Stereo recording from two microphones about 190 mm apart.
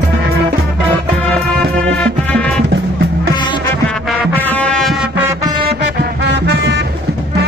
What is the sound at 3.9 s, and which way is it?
Music, centre (ahead or behind).